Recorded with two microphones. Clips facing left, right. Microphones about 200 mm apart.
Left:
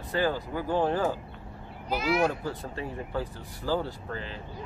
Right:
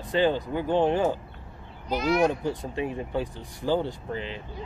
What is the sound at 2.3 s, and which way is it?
Speech, 20° right (ahead or behind).